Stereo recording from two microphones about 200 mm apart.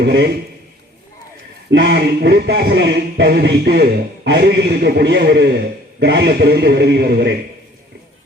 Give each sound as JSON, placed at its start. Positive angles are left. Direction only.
{"t": 0.0, "sound": "speech", "side_deg": -55}
{"t": 1.7, "sound": "speech", "side_deg": -55}